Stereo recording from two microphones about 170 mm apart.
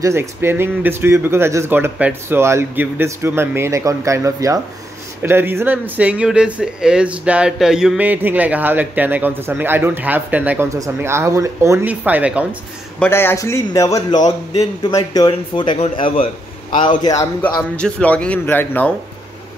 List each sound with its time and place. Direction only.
0.0 s speech: 15° right (ahead or behind)
13.0 s a man's voice: 15° left (ahead or behind); by 16.3 s 35° left (ahead or behind)
17.0 s a man's voice: 20° left (ahead or behind)
17.7 s a man's voice: 5° left (ahead or behind)